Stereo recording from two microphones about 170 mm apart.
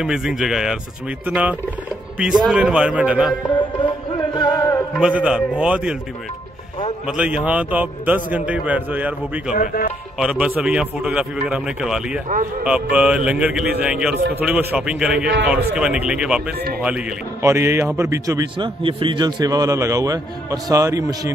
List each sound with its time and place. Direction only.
0.0 s a man's voice: 5° right (ahead or behind)
3.4 s music: 30° left (ahead or behind)
5.0 s a man's voice: 5° right (ahead or behind)
7.1 s a man's voice: 5° right (ahead or behind)
18.8 s a man's voice: 30° right (ahead or behind)